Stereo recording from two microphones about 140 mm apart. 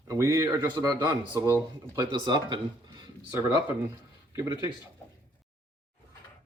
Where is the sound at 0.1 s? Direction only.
25° right (ahead or behind).